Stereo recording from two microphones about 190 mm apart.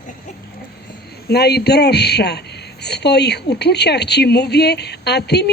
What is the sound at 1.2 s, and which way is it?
Speech, 60° left (ahead or behind).